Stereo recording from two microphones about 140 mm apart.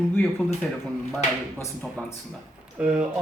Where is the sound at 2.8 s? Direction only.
10° right (ahead or behind).